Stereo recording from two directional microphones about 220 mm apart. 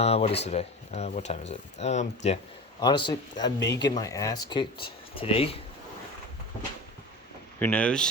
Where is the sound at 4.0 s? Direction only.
15° left (ahead or behind).